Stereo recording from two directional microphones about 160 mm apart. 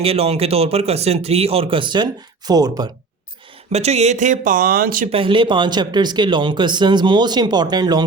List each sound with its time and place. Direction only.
0.0 s speech: 40° right (ahead or behind)
3.7 s speech: 40° right (ahead or behind); by 5.0 s 60° right (ahead or behind)
5.1 s speech: 30° right (ahead or behind)